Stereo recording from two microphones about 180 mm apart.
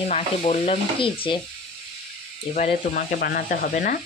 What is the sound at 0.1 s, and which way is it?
Stir, 40° left (ahead or behind).